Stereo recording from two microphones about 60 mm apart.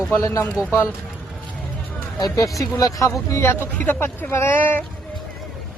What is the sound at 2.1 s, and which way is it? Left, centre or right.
Speech, left.